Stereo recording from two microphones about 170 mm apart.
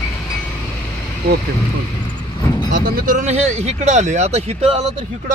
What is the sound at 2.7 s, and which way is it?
Speech, 60° right (ahead or behind).